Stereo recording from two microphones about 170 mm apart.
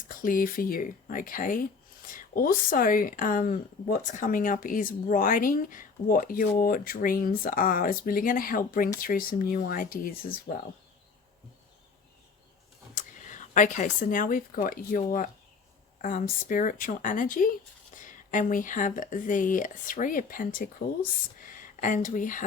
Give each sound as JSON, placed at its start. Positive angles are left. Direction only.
{"t": 0.1, "sound": "speech", "side_deg": 55}
{"t": 13.0, "sound": "speech", "side_deg": 50}